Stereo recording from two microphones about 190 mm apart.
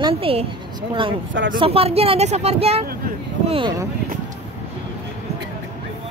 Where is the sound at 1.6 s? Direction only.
30° right (ahead or behind).